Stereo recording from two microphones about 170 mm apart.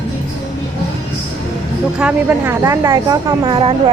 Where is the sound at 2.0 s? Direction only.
10° right (ahead or behind); by 3.7 s 30° right (ahead or behind).